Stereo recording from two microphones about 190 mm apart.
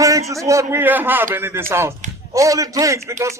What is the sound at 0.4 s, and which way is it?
A man's voice, 15° right (ahead or behind).